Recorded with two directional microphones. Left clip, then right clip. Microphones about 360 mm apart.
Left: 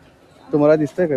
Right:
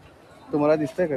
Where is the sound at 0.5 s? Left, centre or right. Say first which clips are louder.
Left 6 dB; left.